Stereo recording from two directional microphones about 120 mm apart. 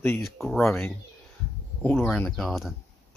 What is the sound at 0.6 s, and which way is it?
Speech, 20° left (ahead or behind).